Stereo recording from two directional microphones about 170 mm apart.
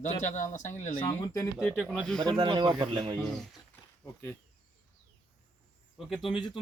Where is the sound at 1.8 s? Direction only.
5° left (ahead or behind).